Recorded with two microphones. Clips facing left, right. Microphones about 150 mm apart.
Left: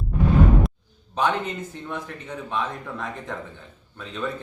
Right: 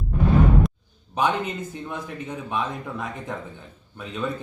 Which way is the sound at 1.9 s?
10° right (ahead or behind).